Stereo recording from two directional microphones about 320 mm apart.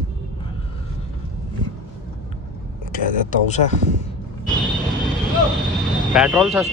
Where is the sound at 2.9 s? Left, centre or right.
Left.